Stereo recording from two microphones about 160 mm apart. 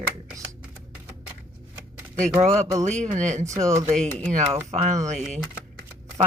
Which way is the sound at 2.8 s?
45° right (ahead or behind).